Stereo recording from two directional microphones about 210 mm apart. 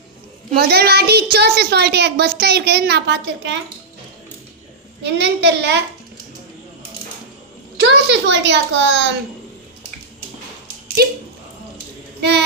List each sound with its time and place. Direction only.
0.5 s a woman's voice: 50° right (ahead or behind)
5.0 s a child's voice: 55° right (ahead or behind)
7.8 s a child's voice: 55° right (ahead or behind)
11.0 s a woman's voice: 45° right (ahead or behind)